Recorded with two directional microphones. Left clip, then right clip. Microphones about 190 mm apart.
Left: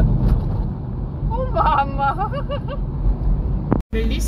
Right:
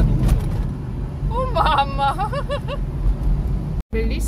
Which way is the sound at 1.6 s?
20° right (ahead or behind).